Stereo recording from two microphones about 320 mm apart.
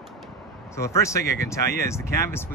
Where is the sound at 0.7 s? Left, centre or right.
Centre.